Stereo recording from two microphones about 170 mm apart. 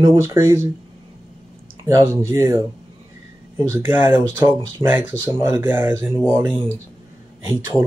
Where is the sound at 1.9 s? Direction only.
20° right (ahead or behind).